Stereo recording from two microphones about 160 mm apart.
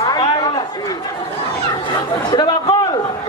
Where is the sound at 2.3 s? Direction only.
25° left (ahead or behind).